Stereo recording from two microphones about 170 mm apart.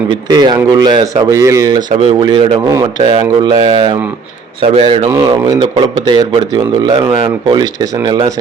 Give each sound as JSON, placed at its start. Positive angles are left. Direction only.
{"t": 0.3, "sound": "a man's voice", "side_deg": -25}
{"t": 2.0, "sound": "a man's voice", "side_deg": -30}